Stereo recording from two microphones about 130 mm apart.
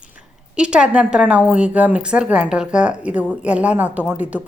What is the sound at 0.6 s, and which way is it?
A woman's voice, 10° right (ahead or behind).